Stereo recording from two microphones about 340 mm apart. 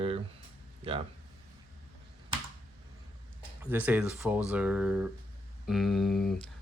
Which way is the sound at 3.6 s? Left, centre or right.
Centre.